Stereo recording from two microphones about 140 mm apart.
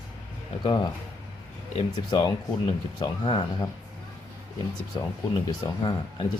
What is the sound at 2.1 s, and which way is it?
Speech, 35° left (ahead or behind).